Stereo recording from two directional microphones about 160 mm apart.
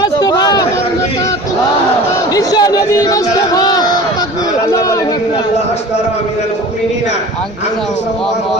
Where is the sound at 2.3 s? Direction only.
25° left (ahead or behind).